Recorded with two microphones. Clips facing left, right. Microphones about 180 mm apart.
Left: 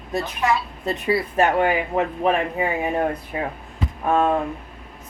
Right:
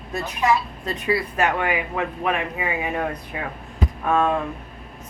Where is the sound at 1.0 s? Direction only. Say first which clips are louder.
Left 2 dB; 30° left (ahead or behind).